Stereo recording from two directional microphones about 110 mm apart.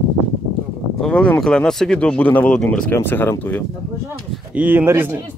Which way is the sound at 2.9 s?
20° left (ahead or behind).